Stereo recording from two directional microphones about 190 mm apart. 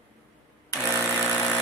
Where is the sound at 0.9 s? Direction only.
10° left (ahead or behind).